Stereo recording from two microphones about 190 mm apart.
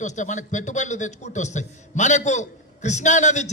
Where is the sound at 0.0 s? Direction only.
40° left (ahead or behind).